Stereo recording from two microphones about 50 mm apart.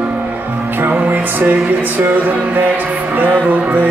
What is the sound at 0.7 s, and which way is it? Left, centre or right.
Music, right.